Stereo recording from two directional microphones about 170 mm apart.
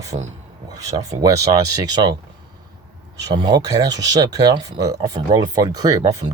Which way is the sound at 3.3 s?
25° right (ahead or behind).